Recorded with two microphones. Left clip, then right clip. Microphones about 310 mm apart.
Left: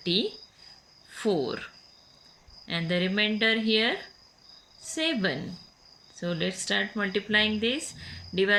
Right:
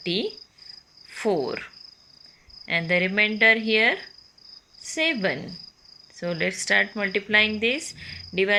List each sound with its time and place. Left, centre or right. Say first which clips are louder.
0.0 s speech: even; right
1.4 s cricket: right 3 dB; centre
2.6 s speech: right 6 dB; centre